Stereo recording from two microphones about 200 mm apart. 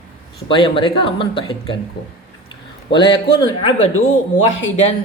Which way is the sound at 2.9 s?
20° left (ahead or behind).